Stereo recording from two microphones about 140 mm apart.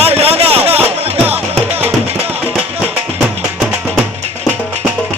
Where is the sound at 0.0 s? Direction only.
45° right (ahead or behind).